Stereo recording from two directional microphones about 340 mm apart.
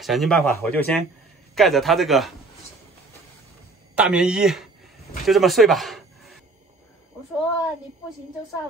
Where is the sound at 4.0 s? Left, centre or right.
Centre.